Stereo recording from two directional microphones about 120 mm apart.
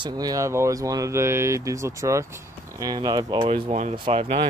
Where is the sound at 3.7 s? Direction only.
80° right.